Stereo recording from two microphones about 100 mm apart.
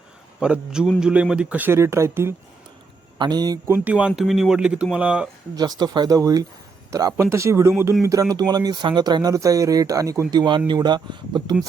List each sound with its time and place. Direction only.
0.3 s a man's voice: 10° right (ahead or behind); by 2.3 s 25° right (ahead or behind)
3.2 s speech: 45° right (ahead or behind)
3.7 s a man's voice: 15° right (ahead or behind)
5.5 s speech: 40° right (ahead or behind)
9.3 s speech: 35° right (ahead or behind)
10.3 s speech: 50° right (ahead or behind)